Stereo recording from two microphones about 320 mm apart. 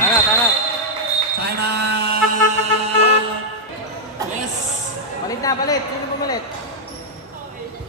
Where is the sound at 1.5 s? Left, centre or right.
Right.